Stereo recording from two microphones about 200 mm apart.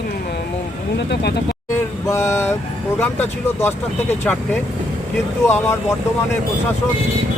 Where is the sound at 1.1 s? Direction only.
55° left (ahead or behind).